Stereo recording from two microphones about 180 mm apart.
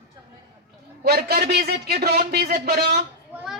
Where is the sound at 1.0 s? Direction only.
60° right (ahead or behind).